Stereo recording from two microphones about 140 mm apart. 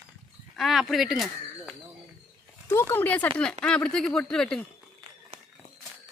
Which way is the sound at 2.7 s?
15° left (ahead or behind).